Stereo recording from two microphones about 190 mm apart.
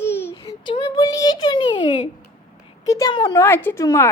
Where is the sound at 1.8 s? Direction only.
35° left (ahead or behind).